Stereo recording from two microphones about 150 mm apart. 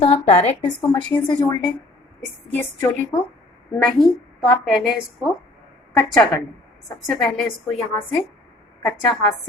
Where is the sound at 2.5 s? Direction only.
15° left (ahead or behind).